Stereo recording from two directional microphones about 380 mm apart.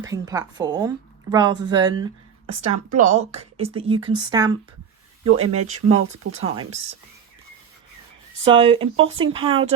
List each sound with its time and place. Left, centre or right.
0.0 s a woman's voice: centre
8.4 s a woman's voice: centre